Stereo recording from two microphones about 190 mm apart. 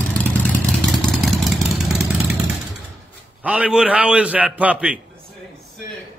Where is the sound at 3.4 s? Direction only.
5° right (ahead or behind).